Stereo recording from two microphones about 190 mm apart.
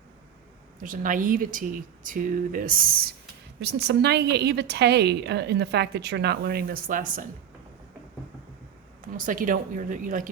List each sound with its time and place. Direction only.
0.8 s speech: 45° right (ahead or behind)
3.6 s a woman's voice: 60° right (ahead or behind); by 7.3 s 45° right (ahead or behind)
9.1 s speech: 45° right (ahead or behind)